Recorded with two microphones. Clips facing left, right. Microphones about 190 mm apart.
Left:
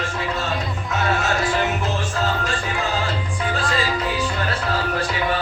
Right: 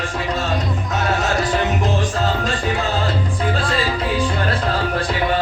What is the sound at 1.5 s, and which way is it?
Music, 15° right (ahead or behind).